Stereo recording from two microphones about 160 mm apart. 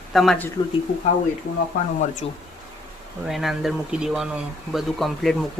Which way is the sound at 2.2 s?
35° left (ahead or behind).